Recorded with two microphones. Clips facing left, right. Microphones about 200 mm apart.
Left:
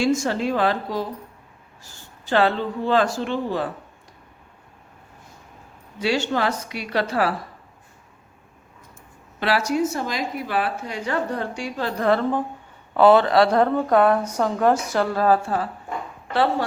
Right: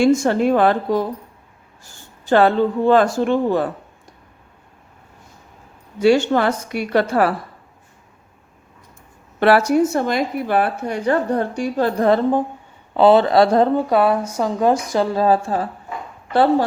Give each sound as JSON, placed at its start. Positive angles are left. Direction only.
{"t": 0.0, "sound": "speech", "side_deg": -55}
{"t": 2.3, "sound": "a woman's voice", "side_deg": -50}
{"t": 6.0, "sound": "a woman's voice", "side_deg": -50}
{"t": 9.4, "sound": "speech", "side_deg": -55}
{"t": 11.9, "sound": "speech", "side_deg": -35}
{"t": 13.8, "sound": "speech", "side_deg": -10}
{"t": 15.3, "sound": "speech", "side_deg": -30}
{"t": 16.3, "sound": "speech", "side_deg": -40}